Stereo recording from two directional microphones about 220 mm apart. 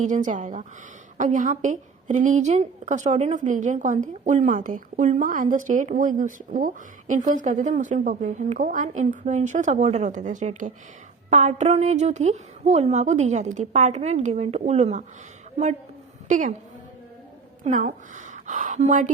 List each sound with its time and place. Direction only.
0.0 s a woman's voice: 35° right (ahead or behind)
16.3 s a woman's voice: 35° right (ahead or behind)
17.6 s a woman's voice: 35° right (ahead or behind)